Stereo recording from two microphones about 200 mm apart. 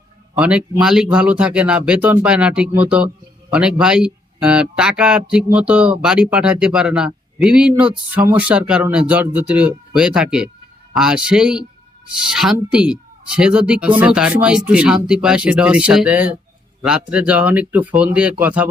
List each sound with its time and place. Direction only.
0.3 s speech: 5° right (ahead or behind)